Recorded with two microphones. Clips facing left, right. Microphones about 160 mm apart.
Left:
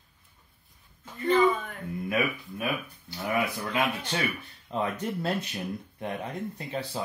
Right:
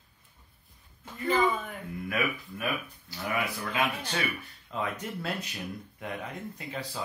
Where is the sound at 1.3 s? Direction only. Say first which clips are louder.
Left 4 dB; centre (ahead or behind).